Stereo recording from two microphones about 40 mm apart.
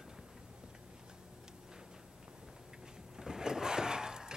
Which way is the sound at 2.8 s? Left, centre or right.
Centre.